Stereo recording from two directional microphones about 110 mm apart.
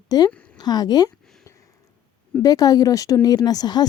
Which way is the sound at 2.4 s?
35° left (ahead or behind).